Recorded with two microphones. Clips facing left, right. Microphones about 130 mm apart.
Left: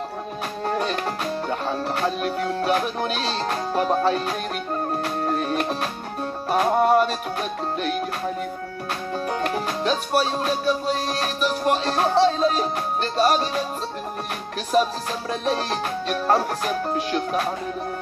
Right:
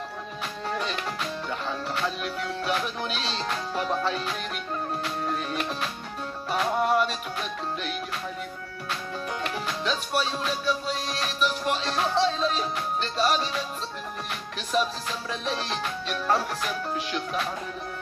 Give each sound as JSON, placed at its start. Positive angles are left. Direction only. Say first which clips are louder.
{"t": 0.7, "sound": "music", "louder": "left 6 dB", "side_deg": 45}
{"t": 9.3, "sound": "music", "louder": "left 6 dB", "side_deg": 45}
{"t": 14.7, "sound": "music", "louder": "left 6 dB", "side_deg": 45}